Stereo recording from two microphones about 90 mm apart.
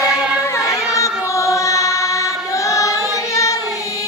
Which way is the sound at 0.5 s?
35° left (ahead or behind).